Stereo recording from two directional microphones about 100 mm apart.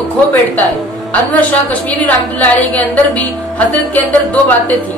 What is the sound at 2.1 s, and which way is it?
Speech, 15° left (ahead or behind).